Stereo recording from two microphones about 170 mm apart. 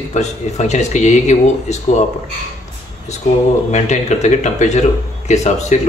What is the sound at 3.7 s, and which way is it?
Speech, 40° left (ahead or behind).